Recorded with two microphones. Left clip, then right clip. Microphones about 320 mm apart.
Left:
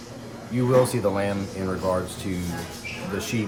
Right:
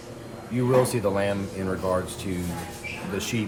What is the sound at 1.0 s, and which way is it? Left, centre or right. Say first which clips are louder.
Speech: even; centre.